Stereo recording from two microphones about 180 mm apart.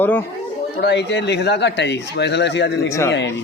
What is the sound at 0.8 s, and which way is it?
Speech, 70° left (ahead or behind).